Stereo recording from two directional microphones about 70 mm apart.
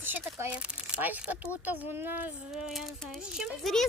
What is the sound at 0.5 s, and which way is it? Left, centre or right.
Speech, centre.